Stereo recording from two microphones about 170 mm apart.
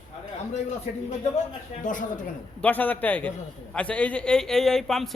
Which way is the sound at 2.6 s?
10° left (ahead or behind).